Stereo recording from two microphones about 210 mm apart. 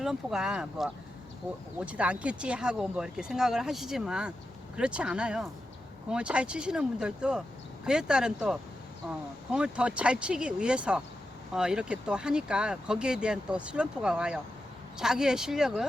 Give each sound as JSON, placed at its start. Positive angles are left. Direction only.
{"t": 0.0, "sound": "speech", "side_deg": 0}